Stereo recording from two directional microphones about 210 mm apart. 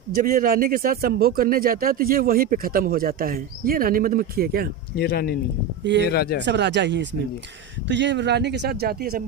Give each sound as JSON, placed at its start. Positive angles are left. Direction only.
{"t": 0.2, "sound": "speech", "side_deg": -45}
{"t": 4.9, "sound": "speech", "side_deg": 45}
{"t": 6.4, "sound": "speech", "side_deg": -55}